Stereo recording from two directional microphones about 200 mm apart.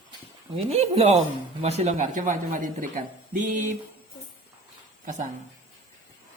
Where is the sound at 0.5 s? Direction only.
30° right (ahead or behind).